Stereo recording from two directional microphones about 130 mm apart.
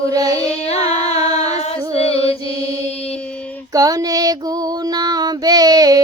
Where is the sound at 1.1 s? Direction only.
30° right (ahead or behind).